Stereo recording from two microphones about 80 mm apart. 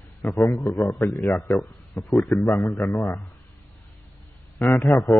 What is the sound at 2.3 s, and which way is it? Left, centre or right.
Speech, left.